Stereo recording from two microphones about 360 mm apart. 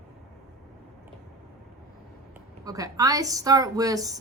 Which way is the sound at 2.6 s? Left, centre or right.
Centre.